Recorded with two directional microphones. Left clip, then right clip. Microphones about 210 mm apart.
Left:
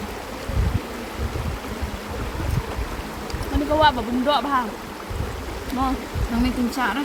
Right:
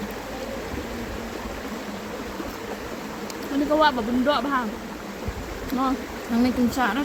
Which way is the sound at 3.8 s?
15° left (ahead or behind).